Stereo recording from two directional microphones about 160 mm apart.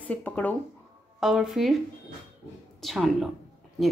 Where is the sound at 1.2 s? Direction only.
Centre (ahead or behind).